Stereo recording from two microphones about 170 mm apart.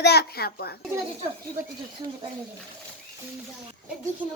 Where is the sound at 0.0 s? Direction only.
70° left (ahead or behind).